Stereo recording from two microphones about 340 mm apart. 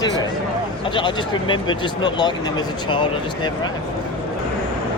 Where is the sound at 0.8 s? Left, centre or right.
Centre.